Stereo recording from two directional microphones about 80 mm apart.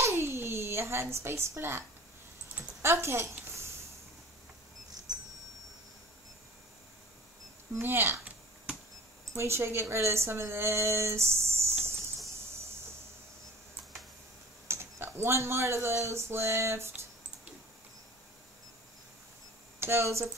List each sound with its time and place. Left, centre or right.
0.0 s a sound: right
2.8 s speech: right
7.7 s speech: right
9.3 s speech: right
14.7 s speech: right
19.8 s speech: right